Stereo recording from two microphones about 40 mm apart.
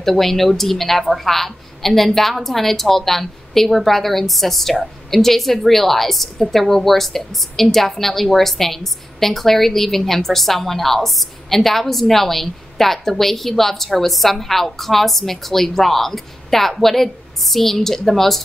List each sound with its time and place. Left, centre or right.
0.0 s a woman's voice: centre